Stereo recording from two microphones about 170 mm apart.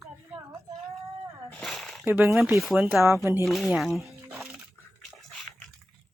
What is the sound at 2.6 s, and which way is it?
Speech, centre (ahead or behind).